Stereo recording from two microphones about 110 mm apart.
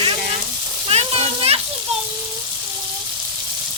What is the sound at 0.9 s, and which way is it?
Frying, 70° right (ahead or behind).